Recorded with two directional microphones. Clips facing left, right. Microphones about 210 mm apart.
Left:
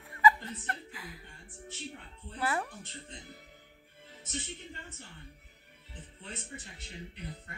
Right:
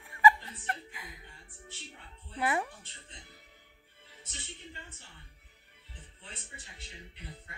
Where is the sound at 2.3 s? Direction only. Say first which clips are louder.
Right 2 dB; 10° right (ahead or behind).